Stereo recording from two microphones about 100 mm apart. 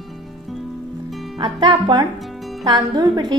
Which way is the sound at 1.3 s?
55° right (ahead or behind).